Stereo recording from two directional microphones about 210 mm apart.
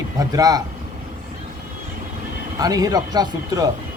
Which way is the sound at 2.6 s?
15° right (ahead or behind).